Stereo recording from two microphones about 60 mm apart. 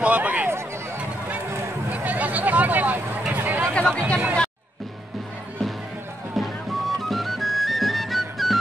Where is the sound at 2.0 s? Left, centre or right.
Right.